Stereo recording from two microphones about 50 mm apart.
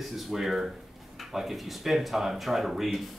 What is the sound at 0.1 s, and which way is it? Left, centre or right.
Speech, centre.